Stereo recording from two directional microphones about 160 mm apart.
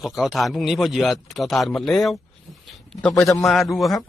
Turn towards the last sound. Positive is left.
turn(degrees=0)  # may be behind; listen again after turning